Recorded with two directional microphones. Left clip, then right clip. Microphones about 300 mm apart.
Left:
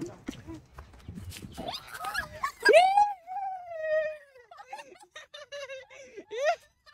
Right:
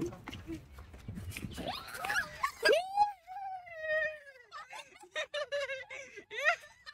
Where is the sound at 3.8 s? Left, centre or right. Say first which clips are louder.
Left 4 dB; centre.